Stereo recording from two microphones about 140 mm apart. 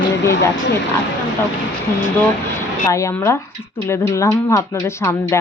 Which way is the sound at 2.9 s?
20° left (ahead or behind).